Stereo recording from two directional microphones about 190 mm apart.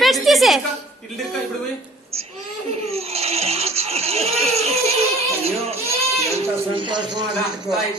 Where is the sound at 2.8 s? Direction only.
35° right (ahead or behind).